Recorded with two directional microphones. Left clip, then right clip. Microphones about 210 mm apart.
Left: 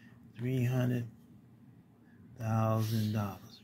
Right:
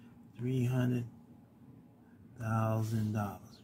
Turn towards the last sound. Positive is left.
turn(degrees=0)  # may be behind; listen again after turning